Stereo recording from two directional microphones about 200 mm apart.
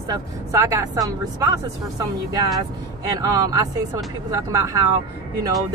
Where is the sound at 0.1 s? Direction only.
15° right (ahead or behind).